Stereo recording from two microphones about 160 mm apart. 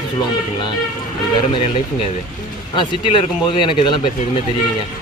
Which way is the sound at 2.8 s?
30° left (ahead or behind).